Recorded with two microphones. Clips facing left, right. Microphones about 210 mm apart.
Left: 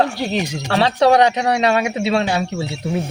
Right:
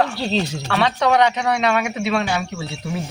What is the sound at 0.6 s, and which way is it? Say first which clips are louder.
Speech: left 6 dB; 35° left (ahead or behind).